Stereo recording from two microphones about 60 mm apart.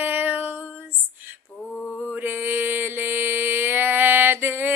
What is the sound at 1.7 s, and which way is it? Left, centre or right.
Mantra, centre.